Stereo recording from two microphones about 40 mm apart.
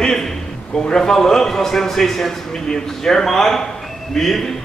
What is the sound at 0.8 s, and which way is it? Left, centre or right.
A man's voice, centre.